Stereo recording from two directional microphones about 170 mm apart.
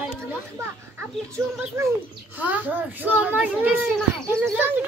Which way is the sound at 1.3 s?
15° right (ahead or behind).